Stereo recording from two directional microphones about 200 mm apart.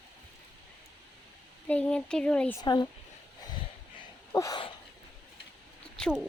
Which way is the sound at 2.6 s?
20° left (ahead or behind).